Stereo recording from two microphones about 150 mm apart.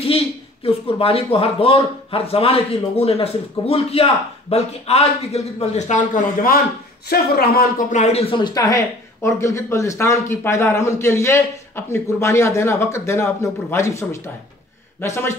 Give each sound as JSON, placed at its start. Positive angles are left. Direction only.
{"t": 0.7, "sound": "speech", "side_deg": 40}
{"t": 7.1, "sound": "speech", "side_deg": 90}
{"t": 7.9, "sound": "speech", "side_deg": 45}